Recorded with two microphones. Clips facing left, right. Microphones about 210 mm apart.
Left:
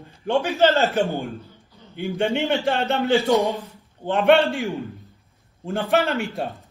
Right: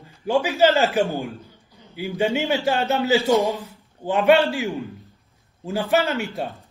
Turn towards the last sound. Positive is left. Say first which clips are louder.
# even
turn(degrees=0)  # may be behind; listen again after turning